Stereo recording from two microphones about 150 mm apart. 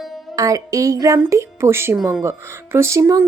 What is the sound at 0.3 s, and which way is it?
A woman's voice, 20° right (ahead or behind).